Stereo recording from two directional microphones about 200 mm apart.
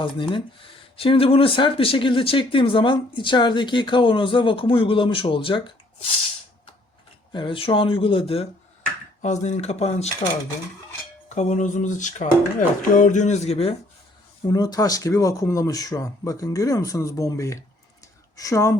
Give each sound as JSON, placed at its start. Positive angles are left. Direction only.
{"t": 0.0, "sound": "speech", "side_deg": 25}
{"t": 7.3, "sound": "speech", "side_deg": 25}
{"t": 11.3, "sound": "speech", "side_deg": 35}
{"t": 14.4, "sound": "speech", "side_deg": 20}